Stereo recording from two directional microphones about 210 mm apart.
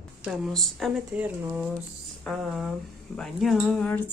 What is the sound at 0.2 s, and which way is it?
Speech, centre (ahead or behind).